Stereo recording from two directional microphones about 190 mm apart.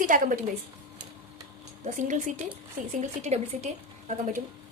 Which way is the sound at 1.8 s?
40° right (ahead or behind).